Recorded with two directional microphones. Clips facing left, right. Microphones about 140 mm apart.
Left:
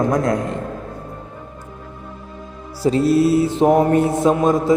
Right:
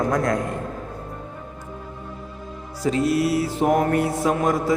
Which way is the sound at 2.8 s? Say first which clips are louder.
Left 5 dB; 35° left (ahead or behind).